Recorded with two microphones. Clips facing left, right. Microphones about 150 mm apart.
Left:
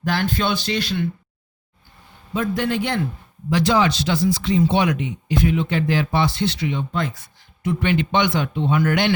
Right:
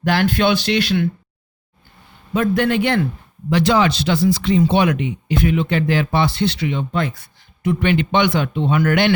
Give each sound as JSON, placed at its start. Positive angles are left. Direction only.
{"t": 0.0, "sound": "speech", "side_deg": -75}
{"t": 2.3, "sound": "speech", "side_deg": -70}